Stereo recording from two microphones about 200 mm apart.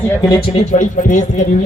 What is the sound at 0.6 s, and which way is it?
Speech, 35° left (ahead or behind).